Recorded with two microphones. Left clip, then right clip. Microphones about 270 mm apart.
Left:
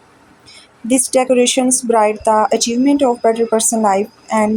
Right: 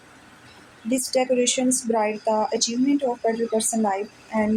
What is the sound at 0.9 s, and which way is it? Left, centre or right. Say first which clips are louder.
A woman's voice: left 8 dB; left.